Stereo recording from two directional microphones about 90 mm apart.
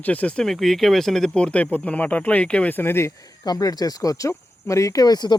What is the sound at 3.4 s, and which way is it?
Speech, 45° left (ahead or behind).